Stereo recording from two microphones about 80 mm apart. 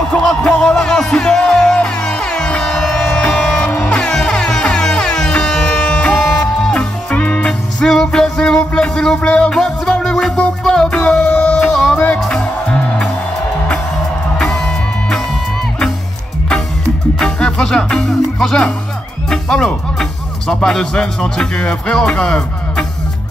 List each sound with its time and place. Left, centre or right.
0.1 s music: centre
6.1 s music: centre
14.4 s music: centre
17.2 s music: centre
19.2 s speech: centre